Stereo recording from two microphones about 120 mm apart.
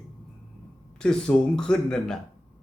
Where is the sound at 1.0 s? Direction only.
5° left (ahead or behind).